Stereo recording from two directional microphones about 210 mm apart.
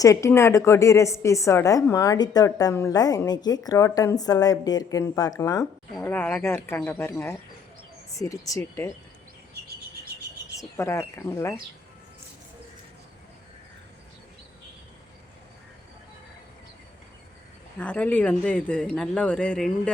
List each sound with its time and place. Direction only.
0.0 s a woman's voice: 15° left (ahead or behind)
10.6 s a woman's voice: 15° left (ahead or behind)
17.7 s speech: 5° left (ahead or behind)